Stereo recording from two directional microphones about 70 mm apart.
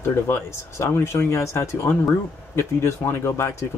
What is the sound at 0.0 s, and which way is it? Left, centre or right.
Speech, left.